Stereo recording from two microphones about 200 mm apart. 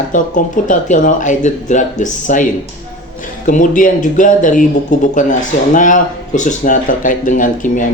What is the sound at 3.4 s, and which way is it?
Speech, 40° left (ahead or behind).